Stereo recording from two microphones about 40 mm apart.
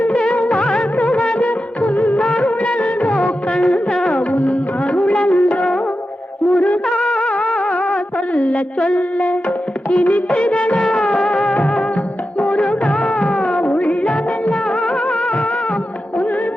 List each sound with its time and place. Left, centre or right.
0.1 s music of bollywood: left
0.3 s music of bollywood: left
0.6 s music of bollywood: left
3.2 s music: left
4.3 s music: left
9.9 s music of bollywood: left
12.5 s music: left
13.5 s music of bollywood: left
15.1 s music: left